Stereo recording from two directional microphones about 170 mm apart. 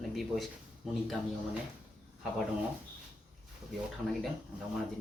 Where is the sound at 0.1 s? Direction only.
Centre (ahead or behind).